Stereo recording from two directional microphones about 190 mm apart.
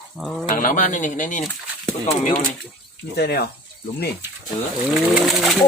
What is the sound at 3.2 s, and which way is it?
Speech, 60° left (ahead or behind).